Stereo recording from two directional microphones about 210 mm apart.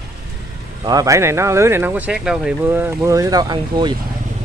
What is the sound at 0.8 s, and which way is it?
Speech, 15° right (ahead or behind).